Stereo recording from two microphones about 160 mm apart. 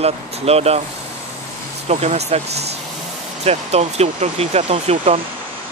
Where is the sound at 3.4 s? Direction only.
40° right (ahead or behind).